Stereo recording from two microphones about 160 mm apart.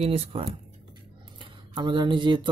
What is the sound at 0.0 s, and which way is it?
Speech, 40° right (ahead or behind).